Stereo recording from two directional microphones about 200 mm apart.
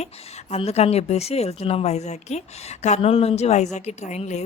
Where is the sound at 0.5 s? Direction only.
30° left (ahead or behind).